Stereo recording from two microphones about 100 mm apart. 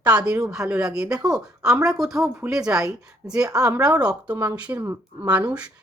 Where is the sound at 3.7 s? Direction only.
35° right (ahead or behind).